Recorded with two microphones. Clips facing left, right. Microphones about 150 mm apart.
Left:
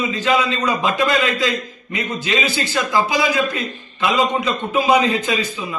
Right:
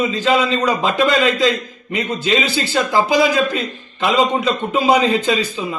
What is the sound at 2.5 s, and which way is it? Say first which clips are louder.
A man's voice: right 2 dB; 30° right (ahead or behind).